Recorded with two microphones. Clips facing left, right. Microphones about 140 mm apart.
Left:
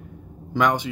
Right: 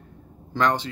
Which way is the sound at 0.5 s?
15° left (ahead or behind).